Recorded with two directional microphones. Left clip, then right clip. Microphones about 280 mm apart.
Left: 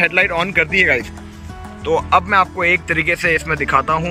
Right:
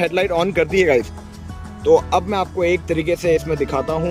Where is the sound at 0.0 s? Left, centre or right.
Centre.